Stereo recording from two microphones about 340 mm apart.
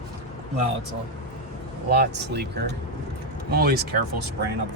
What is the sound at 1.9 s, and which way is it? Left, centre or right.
Speech, right.